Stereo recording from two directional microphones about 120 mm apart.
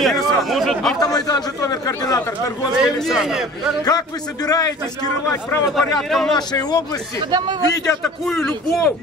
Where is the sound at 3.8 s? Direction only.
35° left (ahead or behind).